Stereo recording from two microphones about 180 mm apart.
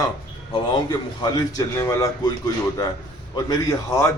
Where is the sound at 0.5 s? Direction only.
25° left (ahead or behind).